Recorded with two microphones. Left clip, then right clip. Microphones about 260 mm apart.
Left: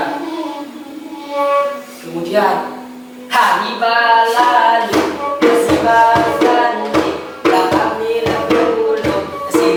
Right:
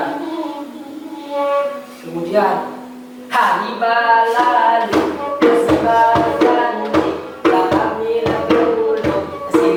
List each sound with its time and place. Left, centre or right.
2.3 s speech: centre
3.3 s music: centre
3.8 s a sound: centre
5.0 s music: centre
7.8 s music: centre
8.2 s music: centre